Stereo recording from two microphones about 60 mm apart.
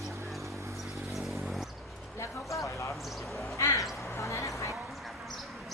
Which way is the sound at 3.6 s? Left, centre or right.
Left.